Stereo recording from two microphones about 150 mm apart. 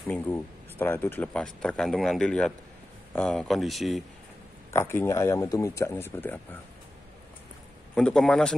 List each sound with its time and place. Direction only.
0.1 s speech: 10° left (ahead or behind)
4.6 s speech: 15° left (ahead or behind)
7.9 s speech: 5° left (ahead or behind)